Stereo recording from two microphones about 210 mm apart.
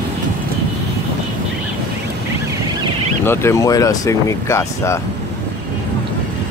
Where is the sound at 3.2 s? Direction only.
15° left (ahead or behind).